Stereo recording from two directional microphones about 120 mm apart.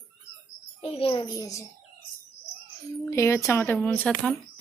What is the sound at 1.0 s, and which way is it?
Speech, 50° left (ahead or behind).